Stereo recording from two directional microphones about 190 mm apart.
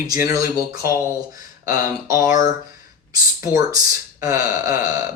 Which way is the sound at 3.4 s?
15° right (ahead or behind).